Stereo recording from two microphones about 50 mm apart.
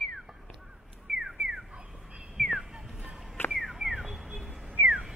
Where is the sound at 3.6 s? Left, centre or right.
Centre.